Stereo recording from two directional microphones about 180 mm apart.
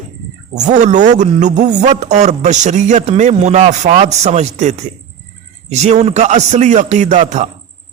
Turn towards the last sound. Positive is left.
turn(degrees=-40)  # may be behind; listen again after turning